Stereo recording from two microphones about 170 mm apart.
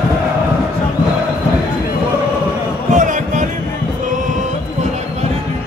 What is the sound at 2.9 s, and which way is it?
Basketball bounce, 50° right (ahead or behind).